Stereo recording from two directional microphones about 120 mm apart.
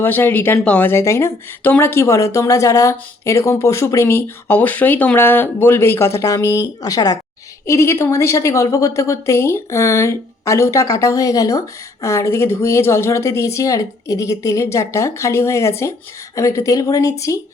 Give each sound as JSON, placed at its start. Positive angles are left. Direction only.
{"t": 0.0, "sound": "speech", "side_deg": 15}